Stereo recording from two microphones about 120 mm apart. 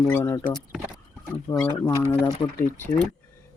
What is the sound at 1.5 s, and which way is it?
Speech, 20° left (ahead or behind).